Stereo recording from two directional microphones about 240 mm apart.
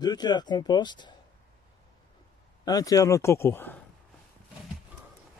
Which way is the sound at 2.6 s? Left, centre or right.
Centre.